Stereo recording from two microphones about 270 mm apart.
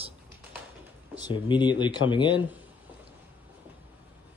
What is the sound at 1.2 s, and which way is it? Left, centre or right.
Speech, centre.